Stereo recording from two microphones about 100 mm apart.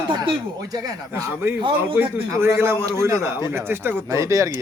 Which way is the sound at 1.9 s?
25° right (ahead or behind).